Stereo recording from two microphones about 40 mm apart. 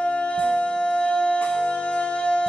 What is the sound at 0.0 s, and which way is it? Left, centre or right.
Music, left.